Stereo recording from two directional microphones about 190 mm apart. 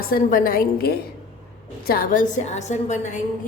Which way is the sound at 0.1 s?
45° left (ahead or behind).